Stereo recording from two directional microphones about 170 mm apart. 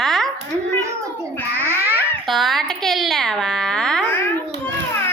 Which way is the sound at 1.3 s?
10° left (ahead or behind).